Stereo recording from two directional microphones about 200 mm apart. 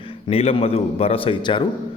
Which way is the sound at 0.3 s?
30° left (ahead or behind).